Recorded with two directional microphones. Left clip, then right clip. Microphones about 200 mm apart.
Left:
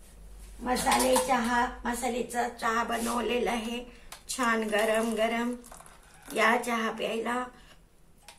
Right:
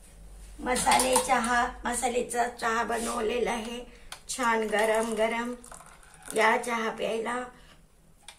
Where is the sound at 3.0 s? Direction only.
Centre (ahead or behind).